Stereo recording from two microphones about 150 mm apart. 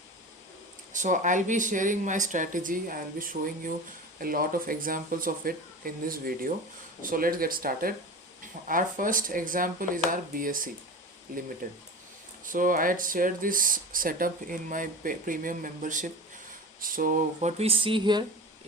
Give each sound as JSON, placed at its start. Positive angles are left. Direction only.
{"t": 0.9, "sound": "speech", "side_deg": -55}
{"t": 12.5, "sound": "speech", "side_deg": -65}
{"t": 17.6, "sound": "speech", "side_deg": -40}